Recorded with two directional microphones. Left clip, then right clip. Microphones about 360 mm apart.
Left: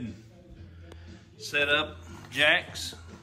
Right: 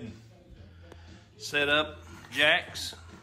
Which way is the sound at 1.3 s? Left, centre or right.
Centre.